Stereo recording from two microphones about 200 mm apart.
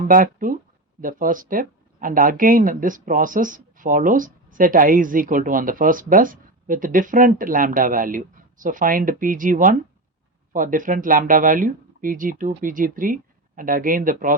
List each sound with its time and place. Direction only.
0.1 s speech: 45° right (ahead or behind)